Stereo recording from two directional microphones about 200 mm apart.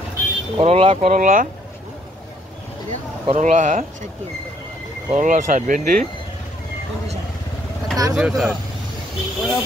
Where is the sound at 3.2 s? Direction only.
35° right (ahead or behind).